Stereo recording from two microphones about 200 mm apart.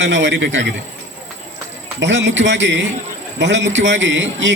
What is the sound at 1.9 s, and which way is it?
A man's voice, 65° right (ahead or behind).